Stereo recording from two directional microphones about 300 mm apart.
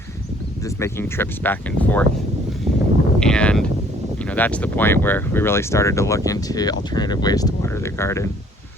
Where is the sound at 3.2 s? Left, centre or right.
Centre.